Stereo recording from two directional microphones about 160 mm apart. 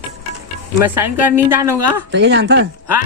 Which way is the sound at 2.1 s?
90° right.